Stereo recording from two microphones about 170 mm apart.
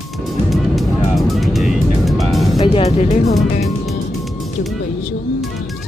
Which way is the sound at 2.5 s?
30° left (ahead or behind).